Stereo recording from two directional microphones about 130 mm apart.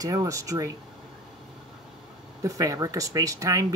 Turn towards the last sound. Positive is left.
turn(degrees=-25)  # may be behind; listen again after turning